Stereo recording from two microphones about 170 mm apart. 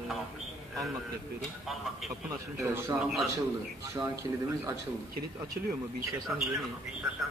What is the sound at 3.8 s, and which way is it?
Speech, 15° right (ahead or behind).